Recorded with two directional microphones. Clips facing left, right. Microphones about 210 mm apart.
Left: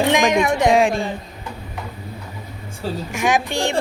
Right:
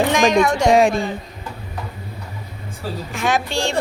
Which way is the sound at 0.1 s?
20° left (ahead or behind).